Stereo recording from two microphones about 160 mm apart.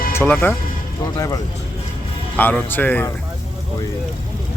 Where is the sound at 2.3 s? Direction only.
10° left (ahead or behind).